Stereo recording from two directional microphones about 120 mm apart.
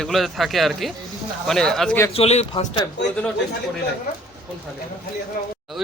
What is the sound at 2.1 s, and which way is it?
Speech, 60° left (ahead or behind).